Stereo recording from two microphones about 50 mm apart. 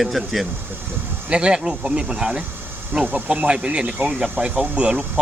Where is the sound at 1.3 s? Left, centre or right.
Right.